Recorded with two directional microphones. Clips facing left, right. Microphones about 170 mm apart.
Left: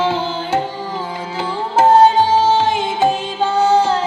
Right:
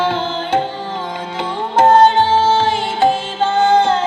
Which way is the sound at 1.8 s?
5° left (ahead or behind).